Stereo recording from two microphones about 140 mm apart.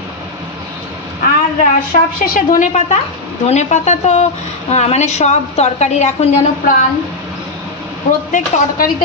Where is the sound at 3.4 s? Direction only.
55° left (ahead or behind).